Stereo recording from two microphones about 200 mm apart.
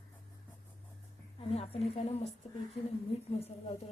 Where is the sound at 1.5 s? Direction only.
30° left (ahead or behind).